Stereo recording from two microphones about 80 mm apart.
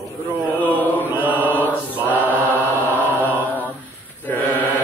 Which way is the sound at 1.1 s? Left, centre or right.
Right.